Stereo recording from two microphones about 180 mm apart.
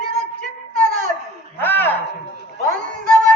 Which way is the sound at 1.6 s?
10° left (ahead or behind).